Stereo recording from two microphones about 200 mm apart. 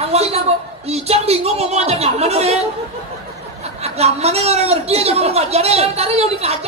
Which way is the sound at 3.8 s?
30° right (ahead or behind).